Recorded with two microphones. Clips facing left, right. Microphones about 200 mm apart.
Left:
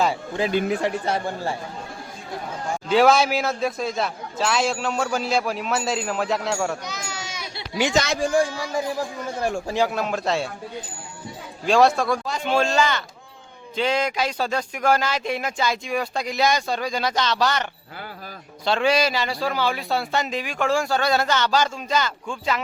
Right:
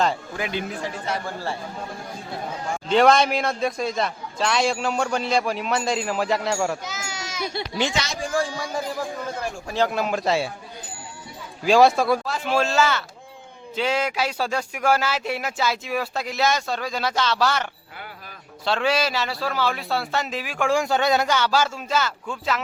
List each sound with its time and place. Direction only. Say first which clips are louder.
0.4 s speech: left 7 dB; 25° left (ahead or behind)
0.8 s speech: left 7 dB; 65° left (ahead or behind)
2.9 s a man's voice: even; 5° left (ahead or behind)
7.9 s speech: left 6 dB; 60° left (ahead or behind)
9.9 s a man's voice: right 1 dB; centre (ahead or behind)
11.6 s a man's voice: right 1 dB; centre (ahead or behind)